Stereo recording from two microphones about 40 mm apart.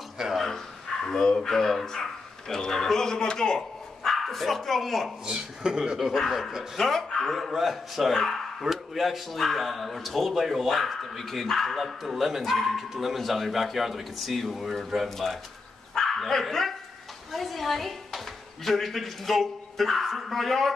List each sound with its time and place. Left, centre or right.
0.2 s speech: centre
1.0 s speech: centre
4.1 s speech: centre
5.2 s speech: centre
5.9 s speech: centre
7.3 s speech: centre